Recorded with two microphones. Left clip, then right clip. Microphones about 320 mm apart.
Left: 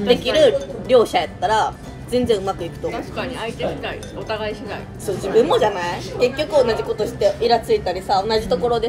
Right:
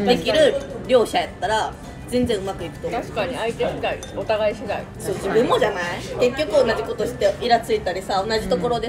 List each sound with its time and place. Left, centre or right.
0.1 s a woman's voice: centre
2.9 s speech: centre
5.5 s a woman's voice: centre